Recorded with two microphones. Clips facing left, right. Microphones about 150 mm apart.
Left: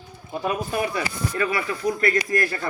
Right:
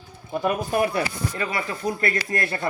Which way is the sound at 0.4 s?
50° right (ahead or behind).